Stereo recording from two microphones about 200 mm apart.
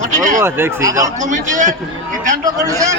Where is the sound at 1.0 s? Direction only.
40° right (ahead or behind).